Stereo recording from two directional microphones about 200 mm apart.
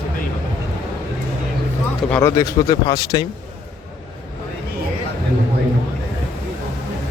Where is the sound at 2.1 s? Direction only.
15° left (ahead or behind).